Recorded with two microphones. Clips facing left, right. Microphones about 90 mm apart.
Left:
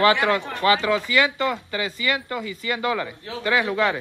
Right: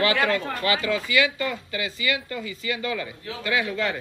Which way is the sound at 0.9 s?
65° left (ahead or behind).